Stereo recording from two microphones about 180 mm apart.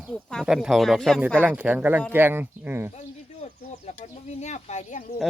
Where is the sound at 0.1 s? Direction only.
5° left (ahead or behind); by 2.9 s 15° right (ahead or behind).